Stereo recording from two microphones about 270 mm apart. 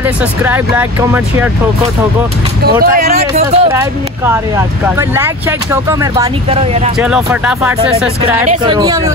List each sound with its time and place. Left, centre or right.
0.0 s speech: centre
2.8 s speech: right
3.7 s speech: centre
6.5 s speech: right
7.0 s speech: centre